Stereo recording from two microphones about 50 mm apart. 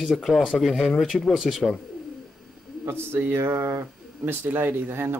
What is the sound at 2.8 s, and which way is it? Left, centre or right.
Speech, right.